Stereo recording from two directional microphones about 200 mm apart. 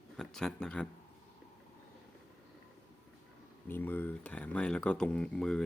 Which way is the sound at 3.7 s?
10° left (ahead or behind).